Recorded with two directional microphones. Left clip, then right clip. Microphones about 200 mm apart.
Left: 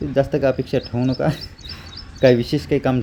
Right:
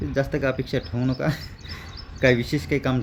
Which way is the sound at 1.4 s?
50° right (ahead or behind).